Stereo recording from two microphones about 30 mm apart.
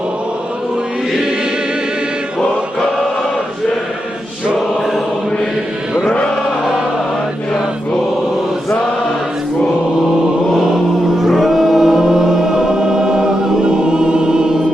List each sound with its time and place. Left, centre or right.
6.1 s chant: left
11.2 s choir: centre; by 14.6 s right